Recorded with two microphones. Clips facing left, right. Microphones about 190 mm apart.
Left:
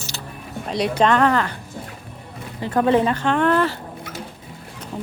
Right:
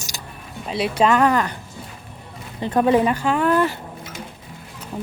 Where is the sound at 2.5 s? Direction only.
20° right (ahead or behind).